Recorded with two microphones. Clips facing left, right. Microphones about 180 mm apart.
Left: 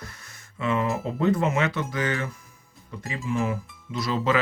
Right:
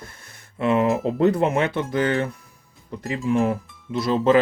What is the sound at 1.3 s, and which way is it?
Speech, 60° right (ahead or behind).